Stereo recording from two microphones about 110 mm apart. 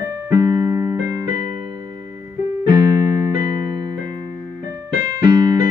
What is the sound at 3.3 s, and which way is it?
Music, 35° right (ahead or behind).